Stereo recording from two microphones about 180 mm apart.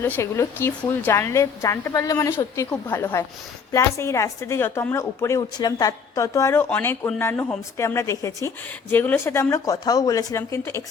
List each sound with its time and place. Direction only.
0.0 s a woman's voice: 15° left (ahead or behind)